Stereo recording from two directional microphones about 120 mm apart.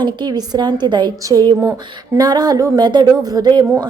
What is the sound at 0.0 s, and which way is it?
A woman's voice, 35° right (ahead or behind).